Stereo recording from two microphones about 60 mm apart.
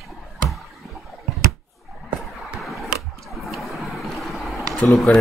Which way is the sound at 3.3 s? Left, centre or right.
Centre.